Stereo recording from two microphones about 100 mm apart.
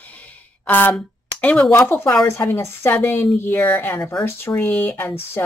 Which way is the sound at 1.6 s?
25° left (ahead or behind).